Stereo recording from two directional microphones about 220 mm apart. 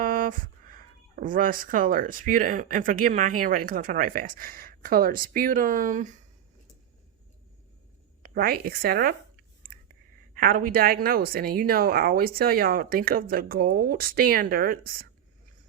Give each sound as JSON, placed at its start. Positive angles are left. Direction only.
{"t": 0.0, "sound": "speech", "side_deg": -40}
{"t": 8.2, "sound": "speech", "side_deg": -40}